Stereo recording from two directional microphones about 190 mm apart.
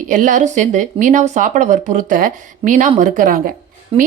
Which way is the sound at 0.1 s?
45° right (ahead or behind).